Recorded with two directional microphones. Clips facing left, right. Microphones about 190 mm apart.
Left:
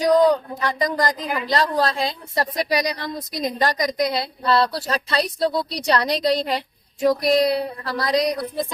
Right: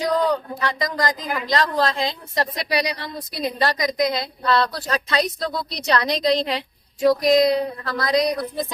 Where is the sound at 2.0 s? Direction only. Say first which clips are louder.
Even; 40° left (ahead or behind).